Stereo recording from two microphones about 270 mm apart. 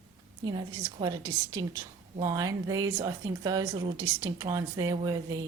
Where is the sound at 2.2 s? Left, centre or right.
Centre.